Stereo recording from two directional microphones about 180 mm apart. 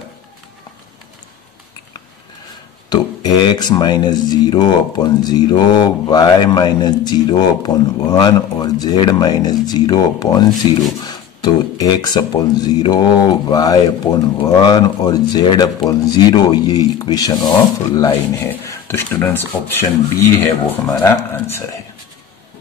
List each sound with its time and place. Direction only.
2.9 s speech: 20° left (ahead or behind)